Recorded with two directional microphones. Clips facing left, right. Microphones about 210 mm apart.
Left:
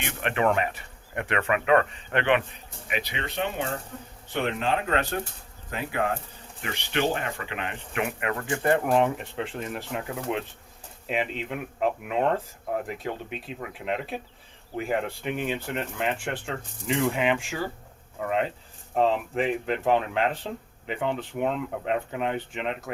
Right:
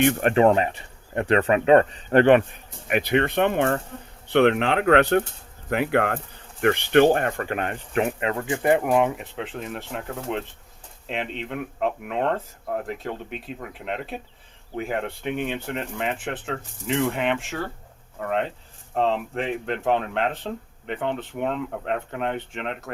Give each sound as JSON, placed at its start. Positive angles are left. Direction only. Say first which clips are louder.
{"t": 0.0, "sound": "speech", "louder": "right 10 dB", "side_deg": -45}
{"t": 0.4, "sound": "speech", "louder": "right 6 dB", "side_deg": -30}
{"t": 2.8, "sound": "speech", "louder": "right 11 dB", "side_deg": -55}
{"t": 4.3, "sound": "speech", "louder": "right 8 dB", "side_deg": -70}
{"t": 6.6, "sound": "speech", "louder": "right 11 dB", "side_deg": -55}
{"t": 8.3, "sound": "speech", "louder": "right 1 dB", "side_deg": -20}